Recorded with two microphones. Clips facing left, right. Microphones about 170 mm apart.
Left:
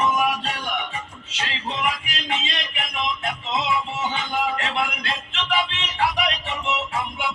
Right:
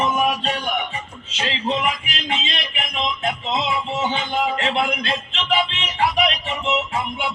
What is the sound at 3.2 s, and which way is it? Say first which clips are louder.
Music: right 3 dB; 25° right (ahead or behind).